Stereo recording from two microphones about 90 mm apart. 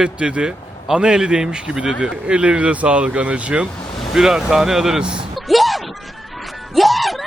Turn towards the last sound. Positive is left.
turn(degrees=0)  # may be behind; listen again after turning